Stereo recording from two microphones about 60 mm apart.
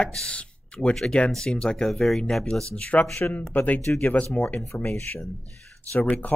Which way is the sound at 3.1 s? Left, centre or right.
Left.